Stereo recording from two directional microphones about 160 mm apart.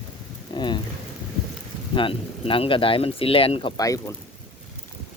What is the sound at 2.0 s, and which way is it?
Speech, 35° left (ahead or behind).